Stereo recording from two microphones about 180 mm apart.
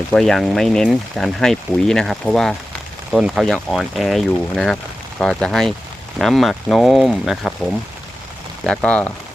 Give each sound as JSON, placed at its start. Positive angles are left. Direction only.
{"t": 0.1, "sound": "speech", "side_deg": 0}